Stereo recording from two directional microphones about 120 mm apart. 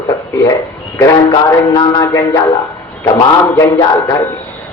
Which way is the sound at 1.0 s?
30° left (ahead or behind).